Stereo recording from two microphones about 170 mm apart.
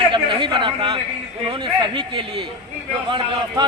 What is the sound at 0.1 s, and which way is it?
A man's voice, 30° right (ahead or behind).